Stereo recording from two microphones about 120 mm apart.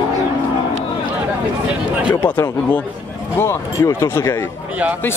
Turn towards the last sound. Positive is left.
turn(degrees=20)  # may be behind; listen again after turning